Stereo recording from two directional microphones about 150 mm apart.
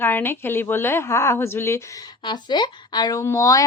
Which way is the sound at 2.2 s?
30° left (ahead or behind).